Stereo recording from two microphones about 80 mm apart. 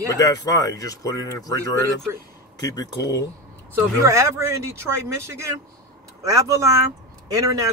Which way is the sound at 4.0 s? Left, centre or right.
Right.